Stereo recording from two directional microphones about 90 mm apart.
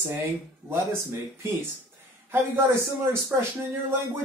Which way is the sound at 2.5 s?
30° right (ahead or behind).